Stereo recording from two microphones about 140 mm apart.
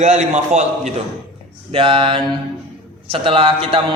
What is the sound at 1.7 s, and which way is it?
A man's voice, 40° right (ahead or behind).